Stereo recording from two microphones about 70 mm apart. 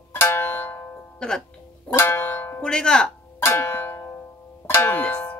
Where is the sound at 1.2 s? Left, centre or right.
Centre.